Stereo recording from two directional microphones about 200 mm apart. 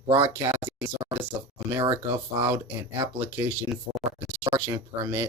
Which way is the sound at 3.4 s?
5° right (ahead or behind).